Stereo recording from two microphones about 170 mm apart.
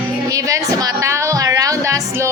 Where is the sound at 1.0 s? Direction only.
20° right (ahead or behind).